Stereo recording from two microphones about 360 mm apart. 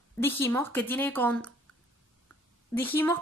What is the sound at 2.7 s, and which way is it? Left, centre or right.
Speech, centre.